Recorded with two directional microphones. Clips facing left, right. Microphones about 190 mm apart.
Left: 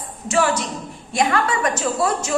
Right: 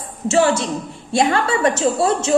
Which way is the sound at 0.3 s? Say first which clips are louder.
Right 4 dB; 25° right (ahead or behind).